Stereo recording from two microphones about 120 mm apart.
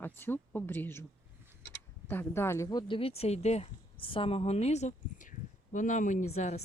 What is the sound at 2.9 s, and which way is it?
A woman's voice, 55° left (ahead or behind).